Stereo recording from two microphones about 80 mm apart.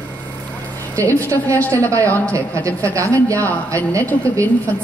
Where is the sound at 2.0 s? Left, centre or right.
Left.